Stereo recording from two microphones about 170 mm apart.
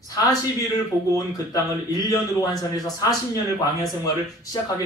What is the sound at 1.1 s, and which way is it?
A man's voice, 20° left (ahead or behind).